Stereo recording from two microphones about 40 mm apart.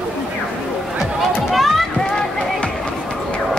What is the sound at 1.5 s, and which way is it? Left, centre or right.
Run, centre.